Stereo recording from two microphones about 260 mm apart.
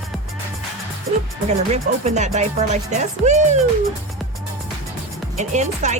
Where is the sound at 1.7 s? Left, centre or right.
Right.